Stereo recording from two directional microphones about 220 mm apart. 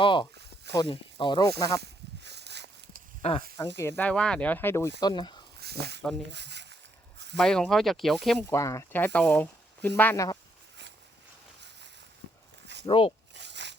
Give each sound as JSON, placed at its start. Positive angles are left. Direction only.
{"t": 0.0, "sound": "speech", "side_deg": 20}
{"t": 1.8, "sound": "a sound", "side_deg": -50}
{"t": 3.2, "sound": "speech", "side_deg": 25}
{"t": 3.8, "sound": "speech", "side_deg": 10}
{"t": 5.5, "sound": "snake", "side_deg": -45}
{"t": 6.3, "sound": "a sound", "side_deg": -50}
{"t": 7.3, "sound": "speech", "side_deg": 5}
{"t": 8.5, "sound": "speech", "side_deg": 15}
{"t": 12.8, "sound": "speech", "side_deg": 25}
{"t": 13.3, "sound": "a sound", "side_deg": -50}